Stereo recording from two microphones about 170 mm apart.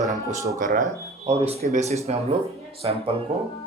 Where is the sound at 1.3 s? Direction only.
35° right (ahead or behind).